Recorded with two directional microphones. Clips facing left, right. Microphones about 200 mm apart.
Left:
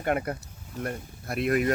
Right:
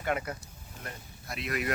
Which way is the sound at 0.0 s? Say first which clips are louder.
Left 5 dB; 50° left (ahead or behind).